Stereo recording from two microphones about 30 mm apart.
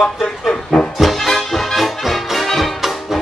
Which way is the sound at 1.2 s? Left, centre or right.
Centre.